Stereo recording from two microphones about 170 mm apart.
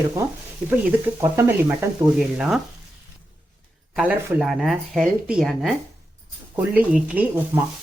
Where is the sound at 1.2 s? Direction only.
15° right (ahead or behind).